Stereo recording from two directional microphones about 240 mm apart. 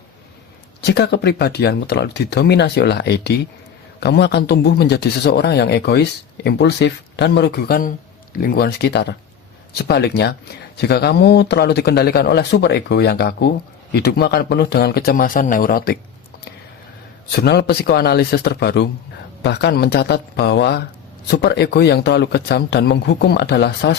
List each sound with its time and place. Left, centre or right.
0.8 s a man's voice: left
17.3 s a man's voice: left